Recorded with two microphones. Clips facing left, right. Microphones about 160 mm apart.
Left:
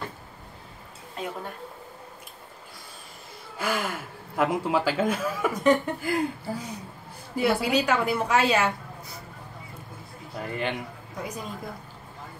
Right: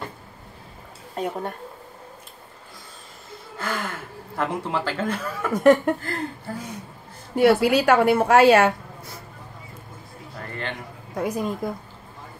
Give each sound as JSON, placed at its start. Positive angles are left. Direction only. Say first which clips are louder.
{"t": 3.5, "sound": "speech", "louder": "left 1 dB", "side_deg": 10}
{"t": 5.5, "sound": "a woman's voice", "louder": "right 7 dB", "side_deg": -60}
{"t": 5.9, "sound": "speech", "louder": "left 4 dB", "side_deg": 10}
{"t": 7.3, "sound": "a woman's voice", "louder": "right 6 dB", "side_deg": -70}
{"t": 10.4, "sound": "a man's voice", "louder": "left 3 dB", "side_deg": 10}
{"t": 11.1, "sound": "a woman's voice", "louder": "right 9 dB", "side_deg": -55}